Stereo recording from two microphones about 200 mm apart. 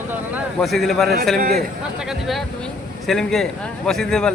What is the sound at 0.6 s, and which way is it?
Speech, centre (ahead or behind).